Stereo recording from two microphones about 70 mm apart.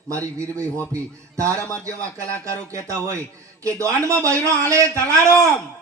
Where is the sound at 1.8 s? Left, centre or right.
Right.